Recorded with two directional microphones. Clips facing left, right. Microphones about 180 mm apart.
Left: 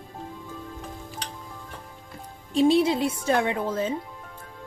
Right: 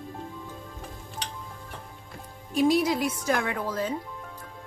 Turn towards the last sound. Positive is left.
turn(degrees=25)  # may be behind; listen again after turning